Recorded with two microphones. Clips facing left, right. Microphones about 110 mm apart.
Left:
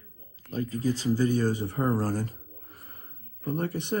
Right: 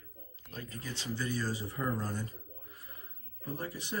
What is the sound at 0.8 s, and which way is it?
A man's voice, 40° left (ahead or behind).